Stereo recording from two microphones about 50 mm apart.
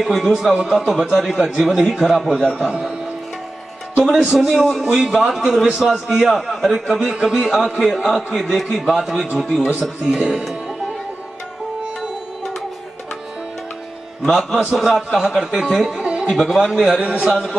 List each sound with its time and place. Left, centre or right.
0.0 s a man's voice: centre
0.3 s a man's voice: centre
2.5 s speech: centre
4.0 s a man's voice: centre
7.1 s a man's voice: centre
14.3 s a man's voice: centre
16.0 s music: right
16.3 s a man's voice: centre
16.5 s speech: centre
17.2 s a man's voice: centre